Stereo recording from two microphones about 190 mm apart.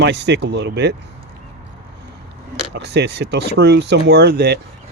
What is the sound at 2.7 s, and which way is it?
Speech, 60° right (ahead or behind).